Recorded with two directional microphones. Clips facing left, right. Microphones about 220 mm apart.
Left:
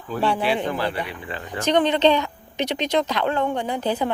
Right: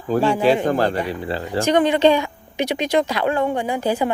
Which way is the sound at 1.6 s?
10° right (ahead or behind).